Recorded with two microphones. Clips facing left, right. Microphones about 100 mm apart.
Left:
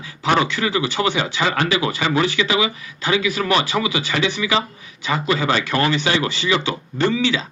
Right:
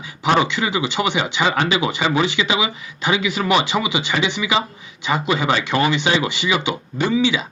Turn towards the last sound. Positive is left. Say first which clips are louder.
# right 1 dB
turn(degrees=-15)  # may be behind; listen again after turning